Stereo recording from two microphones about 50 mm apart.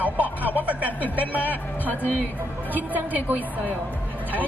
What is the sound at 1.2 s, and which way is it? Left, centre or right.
Speech, left.